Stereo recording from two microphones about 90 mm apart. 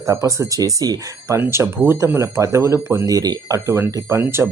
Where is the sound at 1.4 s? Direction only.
25° right (ahead or behind).